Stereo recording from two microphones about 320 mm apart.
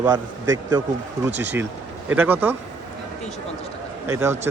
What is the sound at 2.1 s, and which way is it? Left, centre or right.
Speech, centre.